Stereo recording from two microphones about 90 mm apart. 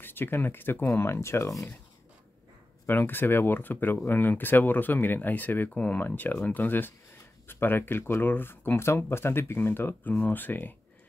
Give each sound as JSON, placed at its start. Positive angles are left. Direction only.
{"t": 0.0, "sound": "speech", "side_deg": 25}
{"t": 2.9, "sound": "speech", "side_deg": 20}